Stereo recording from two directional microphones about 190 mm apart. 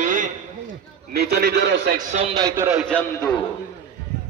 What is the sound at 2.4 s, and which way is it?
Speech, 15° right (ahead or behind).